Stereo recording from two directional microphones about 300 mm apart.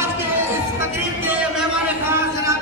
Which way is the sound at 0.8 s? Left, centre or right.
Centre.